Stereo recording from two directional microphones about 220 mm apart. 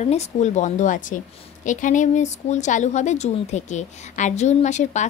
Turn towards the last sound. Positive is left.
turn(degrees=30)  # may be behind; listen again after turning